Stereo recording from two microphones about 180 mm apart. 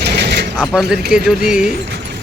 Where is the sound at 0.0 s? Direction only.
70° right (ahead or behind).